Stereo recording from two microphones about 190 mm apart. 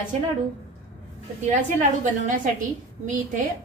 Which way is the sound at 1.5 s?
40° right (ahead or behind).